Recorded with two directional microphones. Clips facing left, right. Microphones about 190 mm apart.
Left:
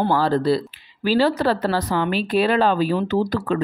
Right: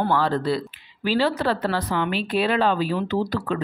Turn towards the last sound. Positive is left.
turn(degrees=45)  # may be behind; listen again after turning